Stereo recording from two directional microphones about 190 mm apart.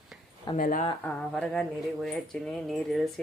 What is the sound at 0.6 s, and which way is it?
Speech, 50° left (ahead or behind).